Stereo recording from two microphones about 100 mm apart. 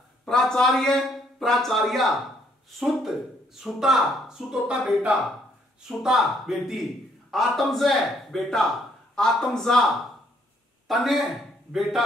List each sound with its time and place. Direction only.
0.2 s speech: 5° left (ahead or behind)
10.9 s a man's voice: centre (ahead or behind)